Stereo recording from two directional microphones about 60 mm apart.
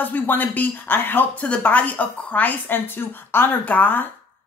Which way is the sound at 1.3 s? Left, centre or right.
Left.